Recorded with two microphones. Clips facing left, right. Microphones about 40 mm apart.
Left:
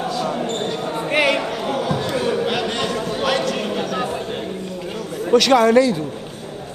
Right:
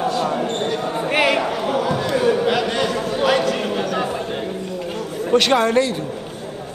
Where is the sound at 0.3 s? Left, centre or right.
Centre.